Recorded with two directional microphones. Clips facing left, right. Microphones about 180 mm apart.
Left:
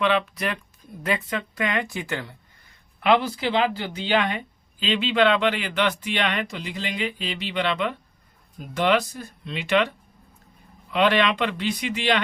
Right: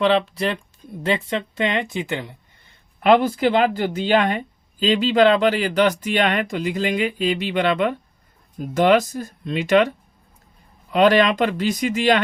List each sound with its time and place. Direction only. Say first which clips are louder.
0.0 s speech: right 4 dB; 30° right (ahead or behind)
3.0 s speech: right 5 dB; 45° right (ahead or behind)
10.9 s speech: right 5 dB; 40° right (ahead or behind)